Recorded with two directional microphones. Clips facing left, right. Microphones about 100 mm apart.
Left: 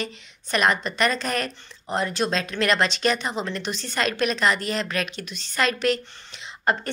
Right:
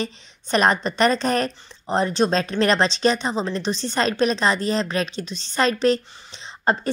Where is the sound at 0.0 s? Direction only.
30° right (ahead or behind).